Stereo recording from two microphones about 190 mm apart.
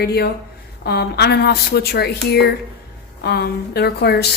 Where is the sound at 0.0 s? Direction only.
55° left (ahead or behind).